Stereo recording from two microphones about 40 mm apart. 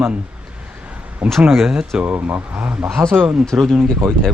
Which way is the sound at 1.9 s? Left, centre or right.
Right.